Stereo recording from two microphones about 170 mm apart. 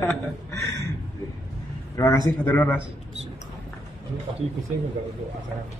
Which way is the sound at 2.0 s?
15° left (ahead or behind).